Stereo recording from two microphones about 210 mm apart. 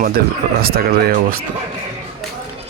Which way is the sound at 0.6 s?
45° right (ahead or behind).